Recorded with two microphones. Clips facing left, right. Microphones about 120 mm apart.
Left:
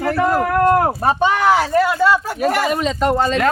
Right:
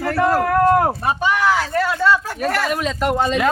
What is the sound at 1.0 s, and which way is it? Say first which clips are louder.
Speech: left 3 dB; 30° left (ahead or behind).